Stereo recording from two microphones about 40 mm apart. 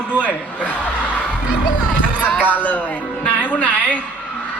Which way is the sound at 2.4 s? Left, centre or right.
Left.